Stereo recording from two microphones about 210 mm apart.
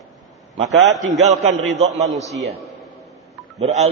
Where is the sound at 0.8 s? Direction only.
55° right (ahead or behind).